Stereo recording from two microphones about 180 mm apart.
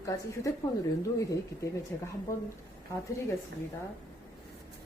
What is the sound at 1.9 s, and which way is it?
Speech, 10° left (ahead or behind).